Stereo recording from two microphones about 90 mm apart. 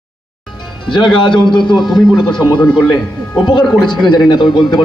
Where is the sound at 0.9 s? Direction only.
60° left (ahead or behind).